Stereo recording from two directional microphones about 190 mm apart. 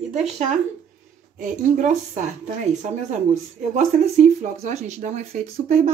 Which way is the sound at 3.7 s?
40° right (ahead or behind).